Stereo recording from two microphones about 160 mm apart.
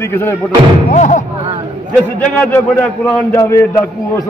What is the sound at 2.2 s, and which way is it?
A man's voice, 10° left (ahead or behind).